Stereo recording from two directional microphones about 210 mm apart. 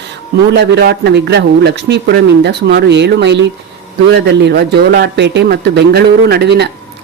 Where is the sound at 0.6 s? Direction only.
55° right (ahead or behind).